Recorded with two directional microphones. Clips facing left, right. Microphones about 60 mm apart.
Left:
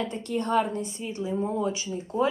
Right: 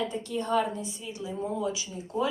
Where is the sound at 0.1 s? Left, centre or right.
Left.